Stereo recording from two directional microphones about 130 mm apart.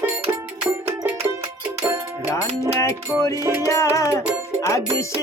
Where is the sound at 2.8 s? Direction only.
25° left (ahead or behind).